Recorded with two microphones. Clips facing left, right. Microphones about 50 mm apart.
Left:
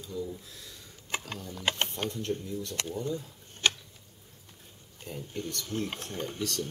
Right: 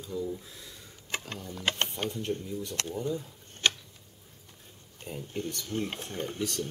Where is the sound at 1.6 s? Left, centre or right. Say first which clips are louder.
Even; centre.